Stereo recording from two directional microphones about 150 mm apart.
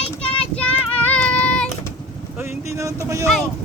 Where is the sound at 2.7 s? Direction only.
20° right (ahead or behind).